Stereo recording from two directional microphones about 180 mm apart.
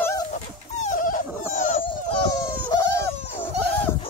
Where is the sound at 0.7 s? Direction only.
45° left (ahead or behind).